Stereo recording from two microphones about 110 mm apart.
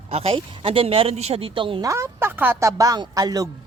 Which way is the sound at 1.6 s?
50° right (ahead or behind).